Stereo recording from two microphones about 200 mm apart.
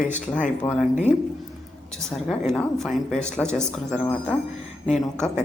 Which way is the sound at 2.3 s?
Centre (ahead or behind).